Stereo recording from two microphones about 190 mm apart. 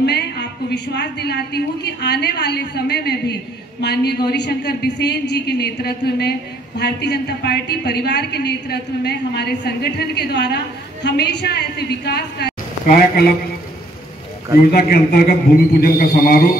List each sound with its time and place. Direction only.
0.0 s a woman's voice: 60° left (ahead or behind)
14.7 s a man's voice: 55° left (ahead or behind)